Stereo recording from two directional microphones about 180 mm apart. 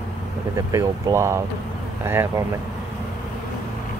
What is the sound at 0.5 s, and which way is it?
Speech, 15° right (ahead or behind).